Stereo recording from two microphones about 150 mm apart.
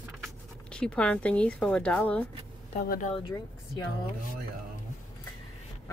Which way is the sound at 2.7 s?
60° left (ahead or behind).